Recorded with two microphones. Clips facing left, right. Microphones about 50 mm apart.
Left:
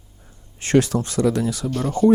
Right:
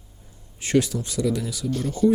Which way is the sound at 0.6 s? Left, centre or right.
Left.